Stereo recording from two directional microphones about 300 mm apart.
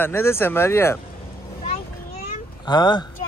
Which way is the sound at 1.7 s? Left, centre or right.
Centre.